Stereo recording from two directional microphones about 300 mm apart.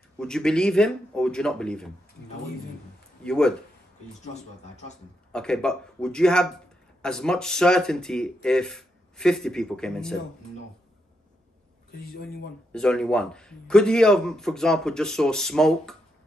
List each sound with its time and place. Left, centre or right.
0.2 s a man's voice: centre
3.3 s a man's voice: centre
5.3 s a man's voice: centre
12.1 s speech: left
12.7 s a man's voice: centre